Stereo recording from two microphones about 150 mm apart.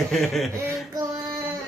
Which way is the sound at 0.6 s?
20° right (ahead or behind).